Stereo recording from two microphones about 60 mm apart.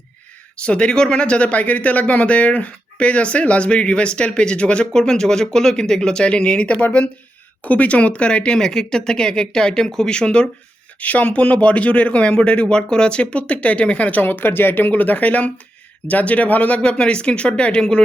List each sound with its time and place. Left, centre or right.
0.6 s speech: centre